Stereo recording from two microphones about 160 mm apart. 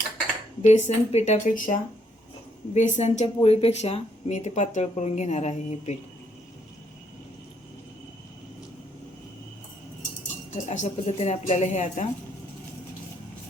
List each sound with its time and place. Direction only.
0.6 s speech: 45° left (ahead or behind)
2.7 s speech: 45° left (ahead or behind)
10.5 s speech: 45° left (ahead or behind)